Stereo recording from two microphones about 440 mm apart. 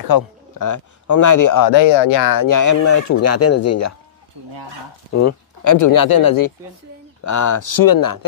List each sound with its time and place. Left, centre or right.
0.0 s speech: left
1.7 s speech: left
5.1 s speech: left